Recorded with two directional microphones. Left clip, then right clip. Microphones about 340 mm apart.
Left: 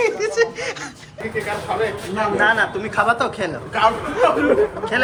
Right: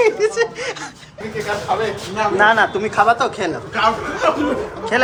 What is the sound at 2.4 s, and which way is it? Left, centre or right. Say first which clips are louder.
Speech: right 4 dB; right.